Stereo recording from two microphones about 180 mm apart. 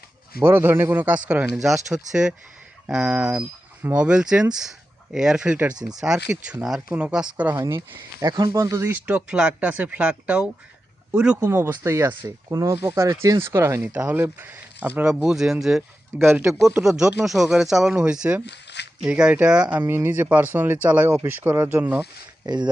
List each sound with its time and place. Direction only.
0.3 s speech: 10° right (ahead or behind)
7.5 s speech: 20° right (ahead or behind); by 16.2 s centre (ahead or behind)
16.2 s speech: 15° right (ahead or behind)
18.4 s a sound: 70° left (ahead or behind)
18.9 s speech: 5° right (ahead or behind)
22.4 s speech: 25° right (ahead or behind)